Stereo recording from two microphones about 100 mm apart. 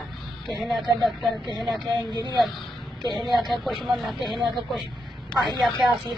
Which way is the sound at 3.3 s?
Centre (ahead or behind).